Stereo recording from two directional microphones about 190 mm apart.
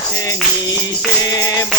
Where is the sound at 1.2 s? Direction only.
20° left (ahead or behind).